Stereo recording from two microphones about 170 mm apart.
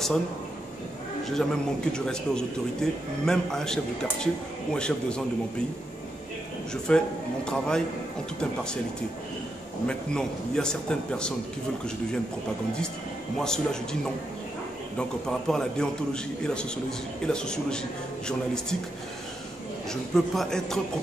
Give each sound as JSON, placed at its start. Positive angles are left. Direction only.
{"t": 1.2, "sound": "a man's voice", "side_deg": 5}
{"t": 6.9, "sound": "a man's voice", "side_deg": 5}
{"t": 9.8, "sound": "a man's voice", "side_deg": 5}
{"t": 13.4, "sound": "a man's voice", "side_deg": 5}
{"t": 15.0, "sound": "a man's voice", "side_deg": 5}
{"t": 19.9, "sound": "a man's voice", "side_deg": 5}